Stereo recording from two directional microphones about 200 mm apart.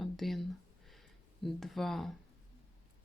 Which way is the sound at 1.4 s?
Centre (ahead or behind).